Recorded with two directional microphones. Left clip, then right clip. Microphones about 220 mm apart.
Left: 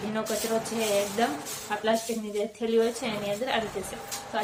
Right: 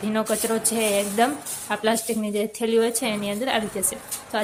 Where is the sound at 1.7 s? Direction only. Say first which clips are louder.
Right 4 dB; 55° right (ahead or behind).